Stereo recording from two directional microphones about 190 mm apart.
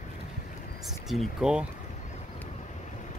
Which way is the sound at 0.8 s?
Centre (ahead or behind).